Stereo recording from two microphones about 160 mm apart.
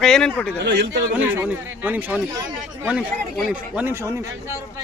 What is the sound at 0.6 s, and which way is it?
Speech, 90° right.